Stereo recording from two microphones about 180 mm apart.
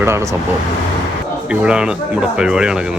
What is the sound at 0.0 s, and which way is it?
Speech, 15° right (ahead or behind).